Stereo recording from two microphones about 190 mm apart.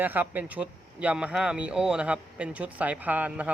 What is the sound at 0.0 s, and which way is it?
Speech, 10° right (ahead or behind).